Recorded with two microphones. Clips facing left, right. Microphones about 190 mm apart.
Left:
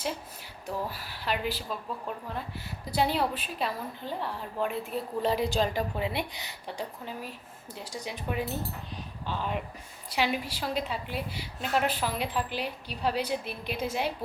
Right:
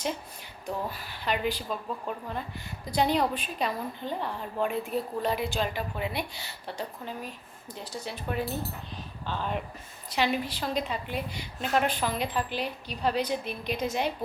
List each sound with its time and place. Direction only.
0.9 s a woman's voice: 5° left (ahead or behind)
5.2 s a woman's voice: 35° left (ahead or behind); by 8.4 s 15° left (ahead or behind)
9.2 s a woman's voice: 5° left (ahead or behind)